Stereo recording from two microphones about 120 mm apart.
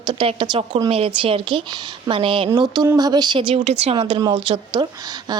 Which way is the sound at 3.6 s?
65° right (ahead or behind).